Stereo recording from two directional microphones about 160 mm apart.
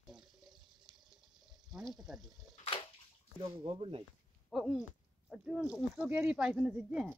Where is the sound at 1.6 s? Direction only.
Centre (ahead or behind).